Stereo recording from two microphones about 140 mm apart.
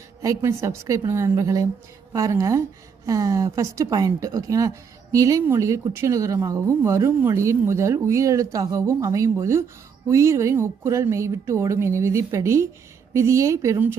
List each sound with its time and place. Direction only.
0.2 s speech: 20° right (ahead or behind)